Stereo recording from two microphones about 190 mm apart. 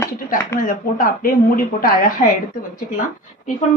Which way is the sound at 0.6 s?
45° left (ahead or behind).